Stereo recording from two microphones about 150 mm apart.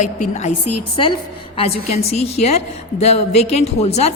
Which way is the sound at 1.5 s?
45° left (ahead or behind).